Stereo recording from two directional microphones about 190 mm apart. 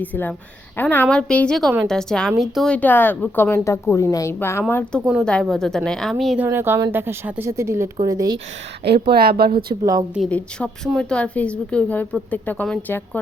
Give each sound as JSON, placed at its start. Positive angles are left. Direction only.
{"t": 0.0, "sound": "a woman's voice", "side_deg": 10}
{"t": 6.4, "sound": "speech", "side_deg": -10}
{"t": 8.8, "sound": "speech", "side_deg": -55}
{"t": 9.8, "sound": "speech", "side_deg": -20}
{"t": 10.2, "sound": "a woman's voice", "side_deg": 5}